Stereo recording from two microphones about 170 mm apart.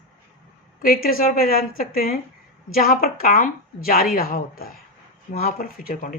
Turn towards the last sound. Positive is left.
turn(degrees=60)  # may be behind; listen again after turning